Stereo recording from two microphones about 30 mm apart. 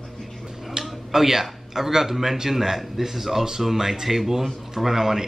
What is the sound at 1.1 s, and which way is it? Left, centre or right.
A man's voice, centre.